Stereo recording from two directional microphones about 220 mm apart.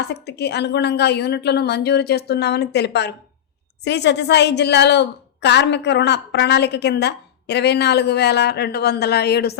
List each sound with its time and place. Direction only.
0.0 s a woman's voice: 50° left (ahead or behind)